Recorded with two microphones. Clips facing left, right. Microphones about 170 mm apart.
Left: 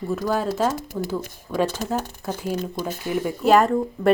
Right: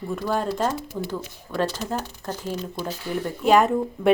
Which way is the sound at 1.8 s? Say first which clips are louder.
Left 2 dB; 50° left (ahead or behind).